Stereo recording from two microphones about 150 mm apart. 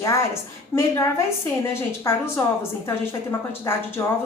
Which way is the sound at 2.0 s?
15° left (ahead or behind).